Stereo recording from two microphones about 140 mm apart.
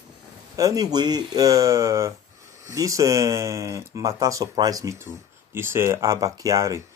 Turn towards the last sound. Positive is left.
turn(degrees=-25)  # may be behind; listen again after turning